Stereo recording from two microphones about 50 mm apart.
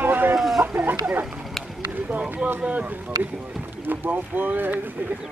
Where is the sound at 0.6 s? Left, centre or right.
Right.